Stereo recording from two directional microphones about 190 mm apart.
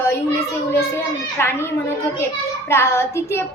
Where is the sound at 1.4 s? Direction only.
10° left (ahead or behind).